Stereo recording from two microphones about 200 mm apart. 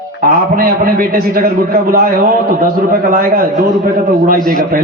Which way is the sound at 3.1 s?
45° right (ahead or behind).